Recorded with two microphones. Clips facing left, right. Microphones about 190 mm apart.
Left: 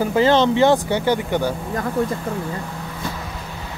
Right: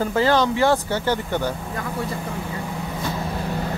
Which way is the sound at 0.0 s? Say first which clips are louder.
Left 3 dB; 20° left (ahead or behind).